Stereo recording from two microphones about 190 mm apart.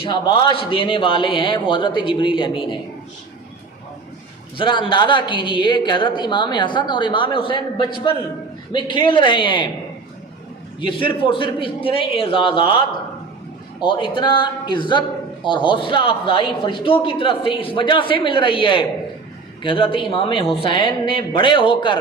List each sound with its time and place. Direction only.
0.0 s a woman's voice: 25° left (ahead or behind)
4.5 s a woman's voice: 25° left (ahead or behind)
10.8 s a woman's voice: 25° left (ahead or behind)
13.8 s a woman's voice: 25° left (ahead or behind)